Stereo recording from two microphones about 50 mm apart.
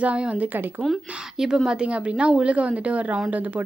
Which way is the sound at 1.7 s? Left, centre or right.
Right.